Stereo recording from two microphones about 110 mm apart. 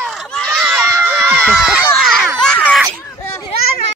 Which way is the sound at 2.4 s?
10° left (ahead or behind).